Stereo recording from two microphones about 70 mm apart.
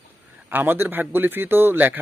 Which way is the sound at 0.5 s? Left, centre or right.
Right.